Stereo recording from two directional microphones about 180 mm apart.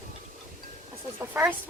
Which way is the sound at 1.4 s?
10° right (ahead or behind).